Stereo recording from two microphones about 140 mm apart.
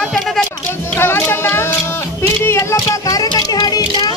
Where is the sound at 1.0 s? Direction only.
15° left (ahead or behind).